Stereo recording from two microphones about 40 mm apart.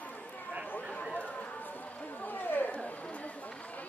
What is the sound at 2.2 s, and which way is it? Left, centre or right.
Chatter, left.